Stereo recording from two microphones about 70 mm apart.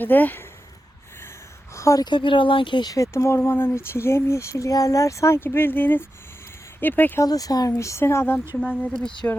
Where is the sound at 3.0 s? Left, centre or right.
Left.